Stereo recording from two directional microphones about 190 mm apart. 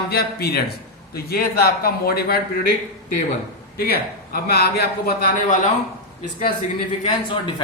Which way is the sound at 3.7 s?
55° left (ahead or behind).